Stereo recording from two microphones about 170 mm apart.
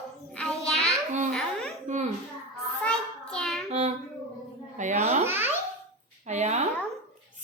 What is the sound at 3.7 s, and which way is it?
Child singing, 40° right (ahead or behind).